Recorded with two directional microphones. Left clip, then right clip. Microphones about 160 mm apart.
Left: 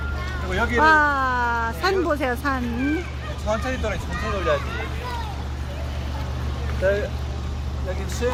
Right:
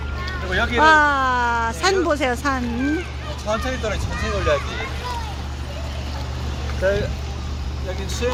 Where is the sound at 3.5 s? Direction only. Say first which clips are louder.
Right 2 dB; 40° right (ahead or behind).